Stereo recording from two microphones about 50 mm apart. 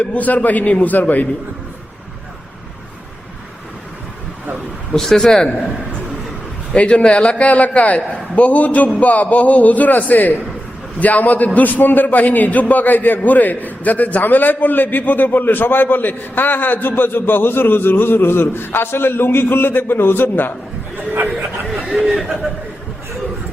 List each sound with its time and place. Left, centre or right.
0.0 s a man's voice: left
4.9 s speech: centre
5.5 s a man's voice: left
21.9 s speech: centre